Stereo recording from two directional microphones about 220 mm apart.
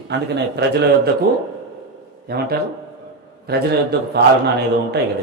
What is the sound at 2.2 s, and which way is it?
A man's voice, 45° right (ahead or behind).